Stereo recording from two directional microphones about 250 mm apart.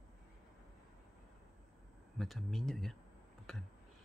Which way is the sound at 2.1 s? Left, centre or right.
Centre.